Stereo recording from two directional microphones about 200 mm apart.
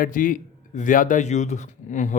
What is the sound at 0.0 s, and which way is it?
A man's voice, 40° left (ahead or behind).